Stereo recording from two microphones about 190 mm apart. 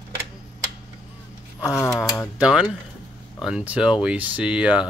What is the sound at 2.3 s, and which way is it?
Speech, 5° right (ahead or behind).